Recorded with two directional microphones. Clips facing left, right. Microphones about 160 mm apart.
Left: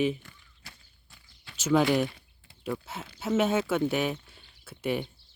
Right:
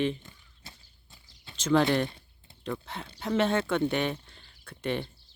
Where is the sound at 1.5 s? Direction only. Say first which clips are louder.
Even; 10° left (ahead or behind).